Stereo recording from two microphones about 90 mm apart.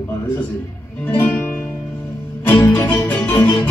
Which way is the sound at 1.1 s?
20° left (ahead or behind).